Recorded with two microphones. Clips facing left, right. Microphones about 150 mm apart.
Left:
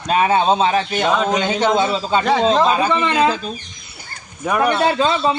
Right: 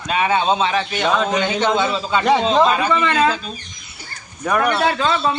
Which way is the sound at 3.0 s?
15° left (ahead or behind).